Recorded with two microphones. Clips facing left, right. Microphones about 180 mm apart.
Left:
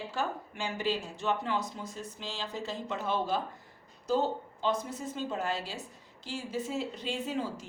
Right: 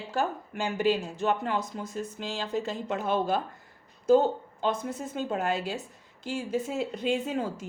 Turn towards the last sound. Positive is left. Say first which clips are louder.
# right 3 dB
turn(degrees=-50)  # may be behind; listen again after turning